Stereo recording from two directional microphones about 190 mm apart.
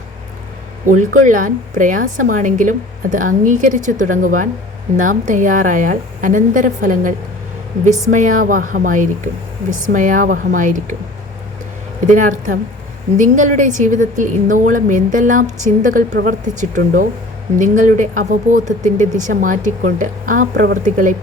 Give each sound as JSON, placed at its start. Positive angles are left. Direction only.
{"t": 0.9, "sound": "a woman's voice", "side_deg": -45}
{"t": 8.1, "sound": "a woman's voice", "side_deg": -45}
{"t": 12.0, "sound": "a woman's voice", "side_deg": -40}